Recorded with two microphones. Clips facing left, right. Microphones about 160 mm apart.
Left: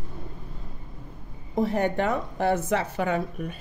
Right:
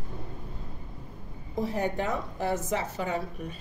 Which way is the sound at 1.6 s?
65° left (ahead or behind).